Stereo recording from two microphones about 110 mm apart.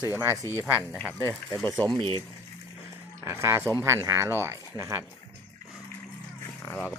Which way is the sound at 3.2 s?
25° right (ahead or behind).